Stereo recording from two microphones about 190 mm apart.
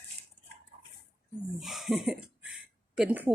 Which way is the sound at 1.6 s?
Centre (ahead or behind).